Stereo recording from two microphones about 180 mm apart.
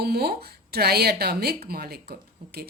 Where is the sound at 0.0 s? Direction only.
60° right (ahead or behind).